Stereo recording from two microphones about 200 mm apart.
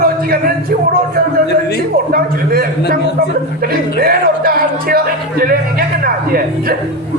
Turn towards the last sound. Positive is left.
turn(degrees=-50)  # may be behind; listen again after turning